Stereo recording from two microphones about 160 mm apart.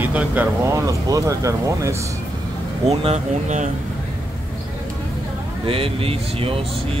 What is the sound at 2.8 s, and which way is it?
Speech, 45° right (ahead or behind).